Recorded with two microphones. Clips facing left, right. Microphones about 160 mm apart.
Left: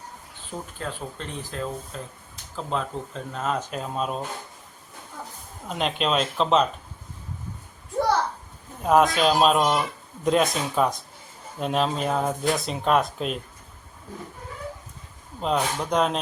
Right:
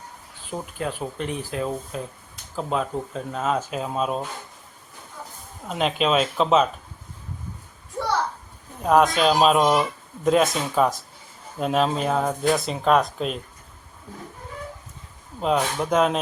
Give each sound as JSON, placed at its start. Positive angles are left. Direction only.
{"t": 0.8, "sound": "speech", "side_deg": -15}
{"t": 5.6, "sound": "speech", "side_deg": 0}
{"t": 8.8, "sound": "speech", "side_deg": 0}
{"t": 15.4, "sound": "speech", "side_deg": -5}